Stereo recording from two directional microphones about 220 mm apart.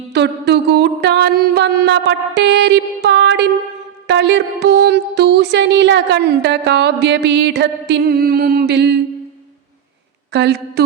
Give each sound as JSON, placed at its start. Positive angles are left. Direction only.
{"t": 0.1, "sound": "music", "side_deg": -50}
{"t": 10.3, "sound": "music", "side_deg": -50}